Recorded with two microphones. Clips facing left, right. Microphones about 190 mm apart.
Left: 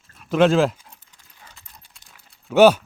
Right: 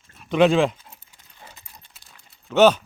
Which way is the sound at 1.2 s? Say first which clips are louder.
Right 5 dB; 20° right (ahead or behind).